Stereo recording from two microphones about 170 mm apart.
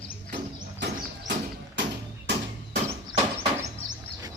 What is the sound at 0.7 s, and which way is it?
Music, 90° right.